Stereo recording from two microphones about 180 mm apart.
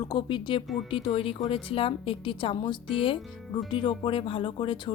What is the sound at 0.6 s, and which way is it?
Speech, centre (ahead or behind).